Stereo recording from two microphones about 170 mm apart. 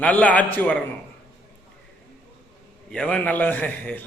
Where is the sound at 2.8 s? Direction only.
5° left (ahead or behind).